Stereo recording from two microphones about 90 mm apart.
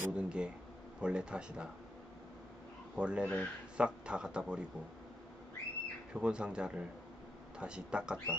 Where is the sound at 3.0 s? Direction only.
10° right (ahead or behind).